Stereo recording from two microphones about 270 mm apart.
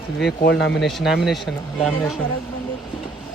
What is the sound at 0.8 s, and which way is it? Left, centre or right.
Speech, centre.